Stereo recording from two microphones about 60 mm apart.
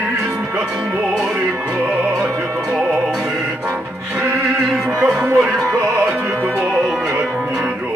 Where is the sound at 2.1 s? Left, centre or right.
Right.